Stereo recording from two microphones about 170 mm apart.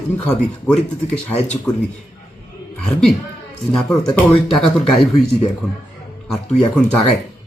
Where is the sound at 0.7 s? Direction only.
40° left (ahead or behind).